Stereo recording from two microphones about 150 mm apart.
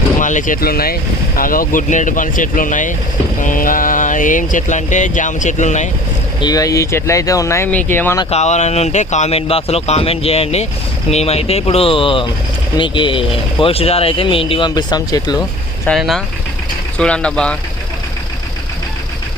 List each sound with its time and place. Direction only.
0.2 s speech: 60° left (ahead or behind); by 0.9 s 85° left
1.4 s speech: 70° left (ahead or behind); by 5.9 s 55° left (ahead or behind)
6.4 s speech: 25° left (ahead or behind)
8.3 s speech: 50° left (ahead or behind); by 15.4 s 25° left (ahead or behind)
15.9 s speech: centre (ahead or behind)